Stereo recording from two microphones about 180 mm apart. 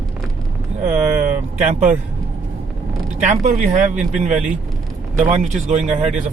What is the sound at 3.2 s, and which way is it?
Speech, 45° right (ahead or behind).